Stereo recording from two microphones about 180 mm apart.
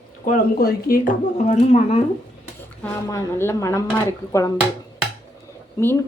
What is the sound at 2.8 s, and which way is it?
A woman's voice, 15° left (ahead or behind).